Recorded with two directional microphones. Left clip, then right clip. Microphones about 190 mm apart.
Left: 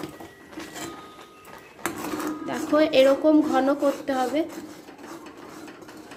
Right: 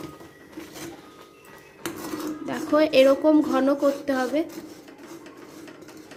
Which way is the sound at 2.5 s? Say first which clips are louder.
Even; 15° right (ahead or behind).